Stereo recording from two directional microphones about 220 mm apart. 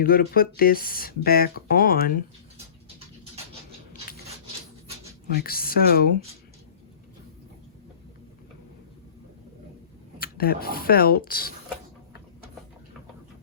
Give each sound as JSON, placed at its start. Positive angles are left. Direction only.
{"t": 0.0, "sound": "speech", "side_deg": 40}
{"t": 5.4, "sound": "speech", "side_deg": 45}
{"t": 10.2, "sound": "speech", "side_deg": 45}